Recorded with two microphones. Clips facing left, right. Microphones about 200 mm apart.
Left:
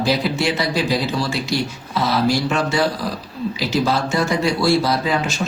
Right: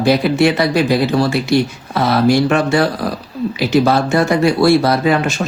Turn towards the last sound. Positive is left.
turn(degrees=-60)  # may be behind; listen again after turning